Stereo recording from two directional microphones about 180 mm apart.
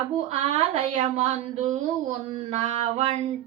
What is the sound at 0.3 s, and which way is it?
Speech, 40° right (ahead or behind).